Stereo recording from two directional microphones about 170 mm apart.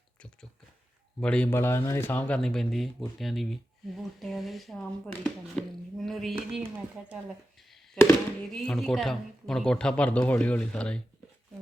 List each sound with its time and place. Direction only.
1.2 s speech: 5° left (ahead or behind)
6.7 s speech: 10° right (ahead or behind)
8.0 s speech: 5° left (ahead or behind)